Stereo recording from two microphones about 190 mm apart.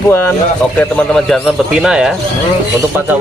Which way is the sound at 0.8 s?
5° left (ahead or behind).